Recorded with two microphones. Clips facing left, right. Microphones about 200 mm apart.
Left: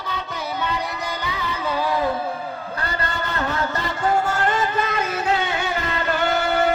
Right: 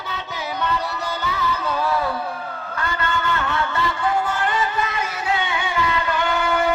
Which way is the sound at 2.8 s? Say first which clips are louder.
Right 4 dB; 35° left (ahead or behind).